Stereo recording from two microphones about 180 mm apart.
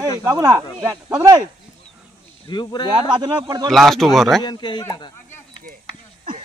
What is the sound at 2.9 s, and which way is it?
Speech, 30° right (ahead or behind).